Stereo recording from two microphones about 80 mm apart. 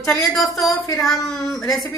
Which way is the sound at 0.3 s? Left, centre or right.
Centre.